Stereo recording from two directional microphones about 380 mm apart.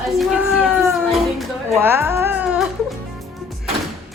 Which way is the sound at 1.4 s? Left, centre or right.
Centre.